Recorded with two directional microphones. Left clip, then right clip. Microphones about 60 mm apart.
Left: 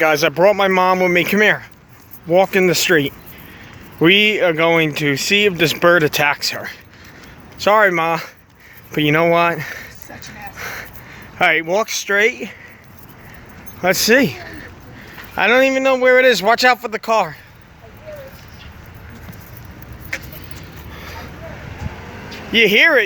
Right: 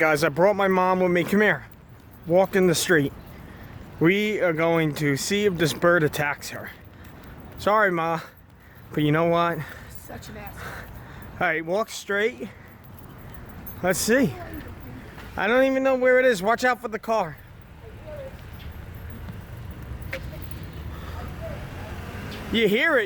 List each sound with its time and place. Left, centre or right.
0.0 s speech: centre
2.3 s speech: left
2.6 s speech: centre
4.2 s speech: left
6.2 s speech: left
7.6 s speech: left
13.8 s speech: left
16.1 s speech: left
16.4 s speech: left
20.9 s vehicle: centre
22.5 s speech: left